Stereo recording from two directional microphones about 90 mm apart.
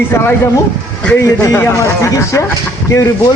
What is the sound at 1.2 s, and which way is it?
Speech, 35° left (ahead or behind).